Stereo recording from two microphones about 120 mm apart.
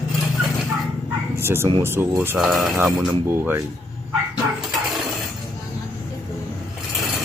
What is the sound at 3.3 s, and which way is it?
Speech, 20° right (ahead or behind).